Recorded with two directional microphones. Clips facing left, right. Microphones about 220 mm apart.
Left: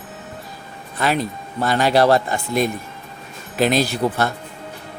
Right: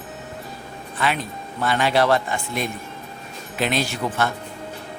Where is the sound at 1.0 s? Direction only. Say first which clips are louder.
Left 4 dB; 40° left (ahead or behind).